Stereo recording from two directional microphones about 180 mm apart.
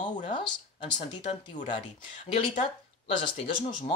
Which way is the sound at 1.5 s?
45° left (ahead or behind).